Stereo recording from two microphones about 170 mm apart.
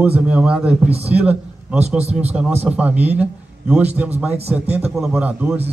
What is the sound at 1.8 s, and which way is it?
Speech, 40° right (ahead or behind).